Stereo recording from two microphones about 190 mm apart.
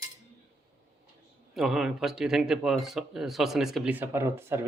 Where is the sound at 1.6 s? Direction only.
Centre (ahead or behind).